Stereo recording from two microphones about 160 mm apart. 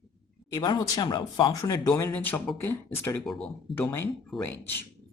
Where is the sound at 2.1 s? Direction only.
10° left (ahead or behind).